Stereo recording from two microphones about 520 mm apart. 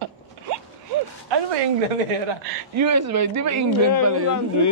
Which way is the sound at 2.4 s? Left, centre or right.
Right.